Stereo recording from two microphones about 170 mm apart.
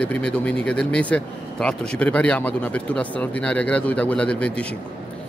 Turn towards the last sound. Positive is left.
turn(degrees=5)  # may be behind; listen again after turning